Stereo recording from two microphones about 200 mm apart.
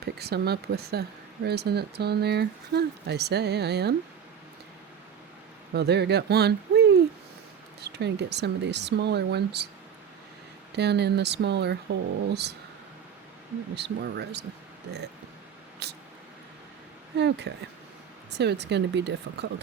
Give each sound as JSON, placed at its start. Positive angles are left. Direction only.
{"t": 0.0, "sound": "speech", "side_deg": -55}
{"t": 5.7, "sound": "speech", "side_deg": -55}
{"t": 10.8, "sound": "speech", "side_deg": -55}
{"t": 13.7, "sound": "speech", "side_deg": -55}
{"t": 15.8, "sound": "a sound", "side_deg": -55}
{"t": 17.2, "sound": "speech", "side_deg": -60}